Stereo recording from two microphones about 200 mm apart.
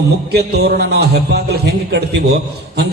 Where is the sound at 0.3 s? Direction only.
55° right (ahead or behind).